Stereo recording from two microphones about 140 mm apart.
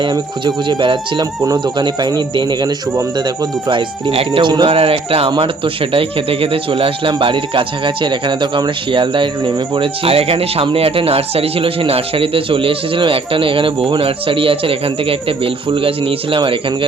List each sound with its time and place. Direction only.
0.0 s speech: 30° right (ahead or behind)